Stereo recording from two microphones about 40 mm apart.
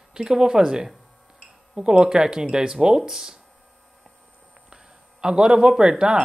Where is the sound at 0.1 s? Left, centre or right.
Centre.